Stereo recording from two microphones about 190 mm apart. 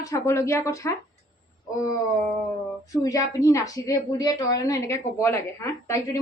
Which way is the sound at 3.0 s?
15° left (ahead or behind).